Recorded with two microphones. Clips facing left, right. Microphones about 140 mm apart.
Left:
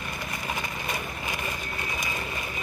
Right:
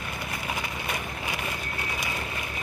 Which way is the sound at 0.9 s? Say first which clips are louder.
Even; 10° right (ahead or behind).